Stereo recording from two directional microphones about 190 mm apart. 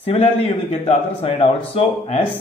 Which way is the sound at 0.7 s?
30° left (ahead or behind).